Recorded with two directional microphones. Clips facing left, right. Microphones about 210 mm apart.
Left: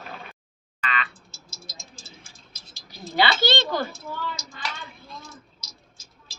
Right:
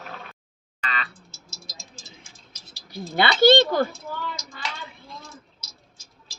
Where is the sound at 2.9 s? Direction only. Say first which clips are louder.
Even; 50° right (ahead or behind).